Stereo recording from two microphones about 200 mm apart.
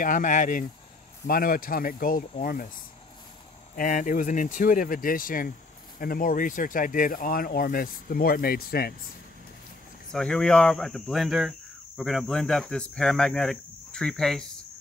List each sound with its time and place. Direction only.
0.0 s speech: 40° left (ahead or behind)
3.7 s speech: 45° left (ahead or behind)
10.1 s speech: 5° left (ahead or behind)